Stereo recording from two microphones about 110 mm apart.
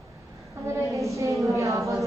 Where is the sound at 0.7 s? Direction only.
25° right (ahead or behind).